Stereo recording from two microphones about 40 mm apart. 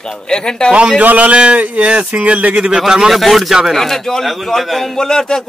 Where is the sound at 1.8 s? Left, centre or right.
Right.